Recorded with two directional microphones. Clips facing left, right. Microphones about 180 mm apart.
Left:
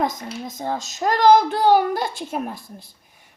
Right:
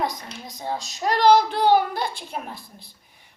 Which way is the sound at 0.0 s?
45° left (ahead or behind).